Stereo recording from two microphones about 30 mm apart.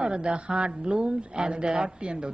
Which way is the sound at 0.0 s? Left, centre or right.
Right.